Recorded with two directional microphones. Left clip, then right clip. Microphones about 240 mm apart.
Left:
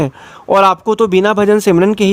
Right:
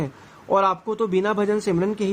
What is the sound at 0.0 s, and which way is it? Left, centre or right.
A man's voice, left.